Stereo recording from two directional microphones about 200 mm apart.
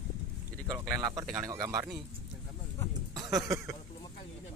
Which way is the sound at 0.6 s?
15° right (ahead or behind).